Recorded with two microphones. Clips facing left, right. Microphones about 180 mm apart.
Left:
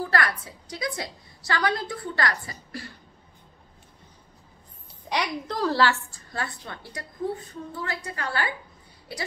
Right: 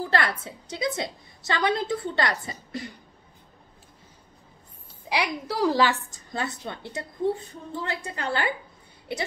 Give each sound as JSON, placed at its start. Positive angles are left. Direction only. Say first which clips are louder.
{"t": 0.1, "sound": "a woman's voice", "louder": "right 1 dB", "side_deg": -25}
{"t": 5.1, "sound": "a woman's voice", "louder": "right 1 dB", "side_deg": -10}